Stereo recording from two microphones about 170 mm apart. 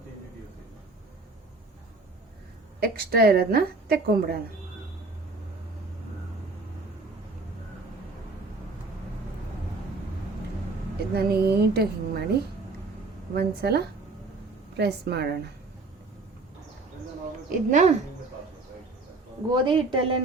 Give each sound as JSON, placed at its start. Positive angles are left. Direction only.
{"t": 2.8, "sound": "a woman's voice", "side_deg": -65}
{"t": 11.1, "sound": "a woman's voice", "side_deg": -65}
{"t": 17.7, "sound": "speech", "side_deg": -45}
{"t": 19.5, "sound": "a woman's voice", "side_deg": -30}